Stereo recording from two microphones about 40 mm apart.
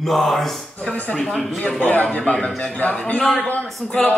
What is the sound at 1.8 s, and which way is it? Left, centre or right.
A woman's voice, left.